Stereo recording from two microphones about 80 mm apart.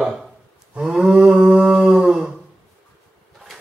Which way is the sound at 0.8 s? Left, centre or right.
Centre.